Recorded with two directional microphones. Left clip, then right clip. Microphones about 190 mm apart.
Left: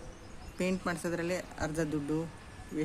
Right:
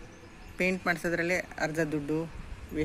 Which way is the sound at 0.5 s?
Centre (ahead or behind).